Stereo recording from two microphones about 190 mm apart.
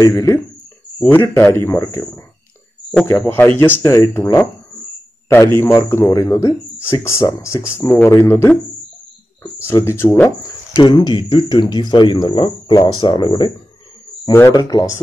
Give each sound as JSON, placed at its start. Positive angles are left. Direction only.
{"t": 0.0, "sound": "a man's voice", "side_deg": 15}